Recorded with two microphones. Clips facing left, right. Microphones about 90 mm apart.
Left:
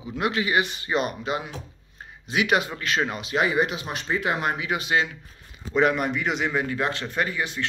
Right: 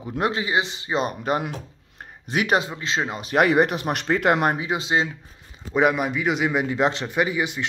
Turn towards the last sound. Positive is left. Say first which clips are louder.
# right 4 dB
turn(degrees=-15)  # may be behind; listen again after turning